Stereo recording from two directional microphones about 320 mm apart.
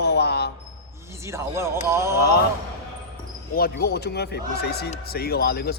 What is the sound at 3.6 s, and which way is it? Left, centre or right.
Speech, left.